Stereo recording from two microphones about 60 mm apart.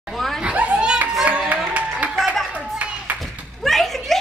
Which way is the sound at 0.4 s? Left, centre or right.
Centre.